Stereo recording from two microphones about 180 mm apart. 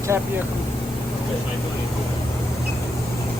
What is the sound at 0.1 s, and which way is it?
Speech, 10° right (ahead or behind).